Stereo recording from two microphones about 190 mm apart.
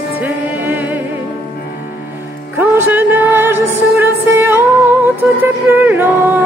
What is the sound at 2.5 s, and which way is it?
Music, 10° right (ahead or behind).